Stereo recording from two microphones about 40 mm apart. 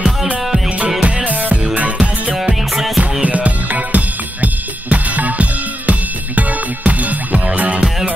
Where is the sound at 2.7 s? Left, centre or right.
Centre.